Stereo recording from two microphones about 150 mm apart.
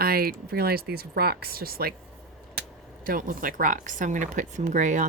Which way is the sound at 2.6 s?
70° right (ahead or behind).